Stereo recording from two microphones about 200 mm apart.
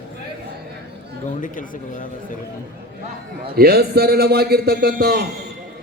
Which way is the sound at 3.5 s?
50° right (ahead or behind).